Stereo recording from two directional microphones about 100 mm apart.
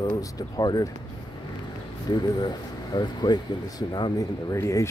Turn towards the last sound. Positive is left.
turn(degrees=30)  # may be behind; listen again after turning